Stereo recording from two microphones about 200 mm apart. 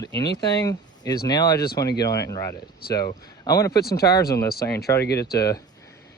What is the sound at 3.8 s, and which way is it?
Speech, 50° left (ahead or behind).